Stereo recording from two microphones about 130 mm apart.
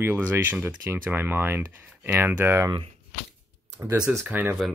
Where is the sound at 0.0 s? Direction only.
15° right (ahead or behind).